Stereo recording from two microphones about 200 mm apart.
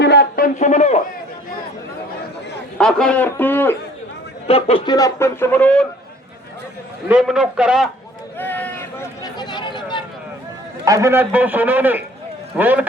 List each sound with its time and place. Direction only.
0.0 s a sound: 55° left (ahead or behind); by 1.0 s 35° left (ahead or behind)
2.7 s a man's voice: 5° left (ahead or behind)
4.4 s a man's voice: 30° left (ahead or behind); by 5.8 s 10° left (ahead or behind)
7.1 s a man's voice: 5° right (ahead or behind)
8.4 s a sound: 10° left (ahead or behind)
10.8 s a man's voice: 15° right (ahead or behind)